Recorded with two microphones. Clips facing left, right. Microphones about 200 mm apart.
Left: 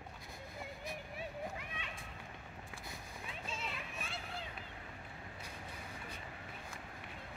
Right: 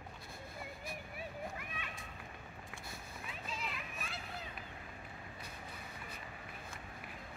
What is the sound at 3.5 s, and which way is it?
Children playing, 25° left (ahead or behind).